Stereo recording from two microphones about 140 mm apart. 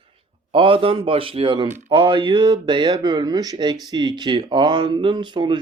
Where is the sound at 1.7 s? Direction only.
55° right (ahead or behind).